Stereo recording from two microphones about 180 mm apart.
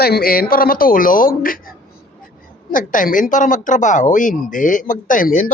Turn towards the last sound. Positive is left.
turn(degrees=50)  # may be behind; listen again after turning